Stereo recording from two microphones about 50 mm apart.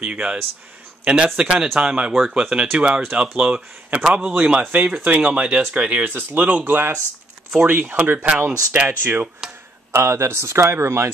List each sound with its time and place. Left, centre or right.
0.0 s speech: right
2.1 s speech: centre; by 6.0 s right
6.0 s speech: right
9.4 s a sound: centre
9.9 s speech: right